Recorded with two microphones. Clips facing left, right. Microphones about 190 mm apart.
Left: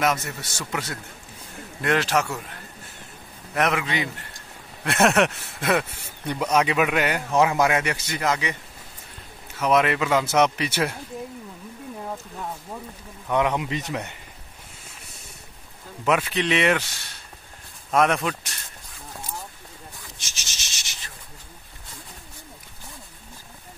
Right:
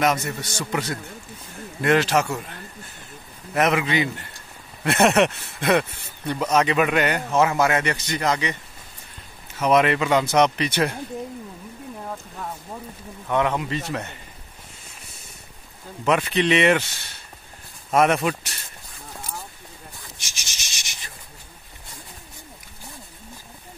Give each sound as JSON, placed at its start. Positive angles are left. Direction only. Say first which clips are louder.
{"t": 0.0, "sound": "speech", "louder": "right 2 dB", "side_deg": 0}
{"t": 3.5, "sound": "a man's voice", "louder": "right 3 dB", "side_deg": -5}
{"t": 9.6, "sound": "speech", "louder": "right 2 dB", "side_deg": 0}
{"t": 13.3, "sound": "a man's voice", "louder": "even", "side_deg": 15}
{"t": 16.1, "sound": "speech", "louder": "right 2 dB", "side_deg": 5}
{"t": 17.9, "sound": "speech", "louder": "right 2 dB", "side_deg": -5}
{"t": 20.2, "sound": "rub", "louder": "even", "side_deg": -10}